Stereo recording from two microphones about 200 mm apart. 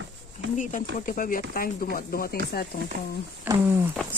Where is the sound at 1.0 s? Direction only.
45° left (ahead or behind).